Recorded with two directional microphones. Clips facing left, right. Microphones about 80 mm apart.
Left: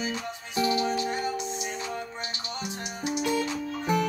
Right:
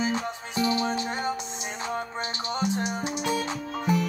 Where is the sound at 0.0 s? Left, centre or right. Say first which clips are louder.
Right 5 dB; right.